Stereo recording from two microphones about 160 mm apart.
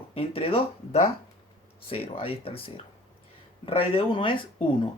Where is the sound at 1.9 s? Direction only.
35° left (ahead or behind).